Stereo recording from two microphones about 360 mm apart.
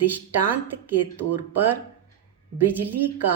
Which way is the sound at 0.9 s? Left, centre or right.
Right.